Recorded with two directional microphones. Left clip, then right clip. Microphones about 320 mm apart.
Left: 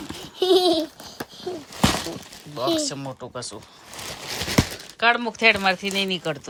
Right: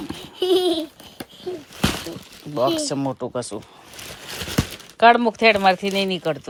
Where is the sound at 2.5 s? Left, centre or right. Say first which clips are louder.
Right 3 dB; centre.